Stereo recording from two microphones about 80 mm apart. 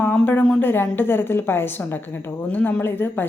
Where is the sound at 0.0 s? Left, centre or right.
Left.